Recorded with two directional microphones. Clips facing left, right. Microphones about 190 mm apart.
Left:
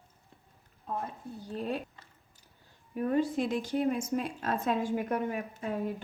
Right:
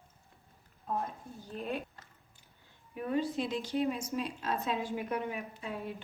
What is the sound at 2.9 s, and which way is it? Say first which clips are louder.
A woman's voice: left 4 dB; 45° left (ahead or behind).